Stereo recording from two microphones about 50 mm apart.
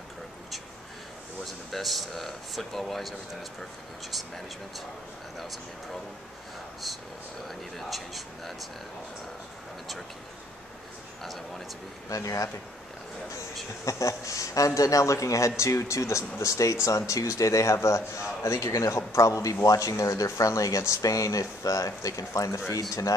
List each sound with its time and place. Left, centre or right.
1.4 s speech: centre
7.4 s speech: centre
11.2 s speech: centre
12.2 s speech: left
13.8 s speech: left